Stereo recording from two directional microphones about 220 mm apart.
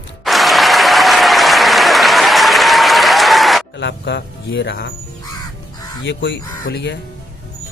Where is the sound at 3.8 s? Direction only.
55° left (ahead or behind).